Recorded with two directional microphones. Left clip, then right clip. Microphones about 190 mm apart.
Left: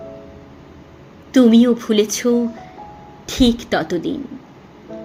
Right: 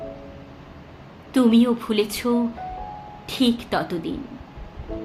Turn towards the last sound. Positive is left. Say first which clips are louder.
# left 5 dB
turn(degrees=15)  # may be behind; listen again after turning